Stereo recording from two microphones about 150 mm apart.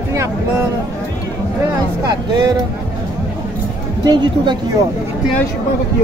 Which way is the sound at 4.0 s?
30° right (ahead or behind).